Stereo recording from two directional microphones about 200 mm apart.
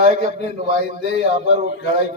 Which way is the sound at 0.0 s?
35° right (ahead or behind).